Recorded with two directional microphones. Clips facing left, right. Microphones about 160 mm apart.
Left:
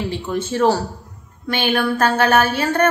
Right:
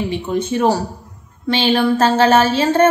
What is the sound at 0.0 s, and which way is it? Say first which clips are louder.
A woman's voice: right 3 dB; 20° right (ahead or behind).